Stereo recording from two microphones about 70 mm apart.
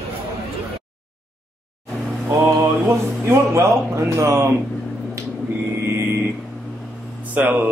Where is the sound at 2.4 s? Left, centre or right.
Right.